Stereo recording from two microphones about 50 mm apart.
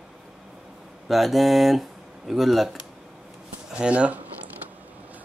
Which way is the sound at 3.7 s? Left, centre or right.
Right.